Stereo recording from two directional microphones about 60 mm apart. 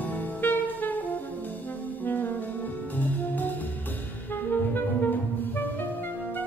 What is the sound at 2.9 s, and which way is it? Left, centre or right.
Music, left.